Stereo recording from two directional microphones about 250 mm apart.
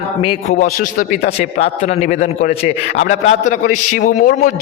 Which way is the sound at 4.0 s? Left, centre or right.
Left.